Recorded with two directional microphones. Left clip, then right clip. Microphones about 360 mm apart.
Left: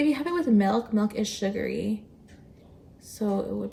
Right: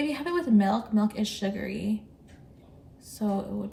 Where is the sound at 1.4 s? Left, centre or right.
Right.